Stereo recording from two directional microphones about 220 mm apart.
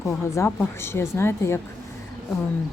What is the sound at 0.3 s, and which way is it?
Speech, 10° left (ahead or behind).